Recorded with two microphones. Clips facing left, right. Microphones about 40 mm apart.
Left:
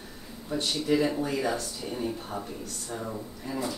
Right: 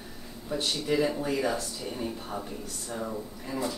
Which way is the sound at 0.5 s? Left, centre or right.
Centre.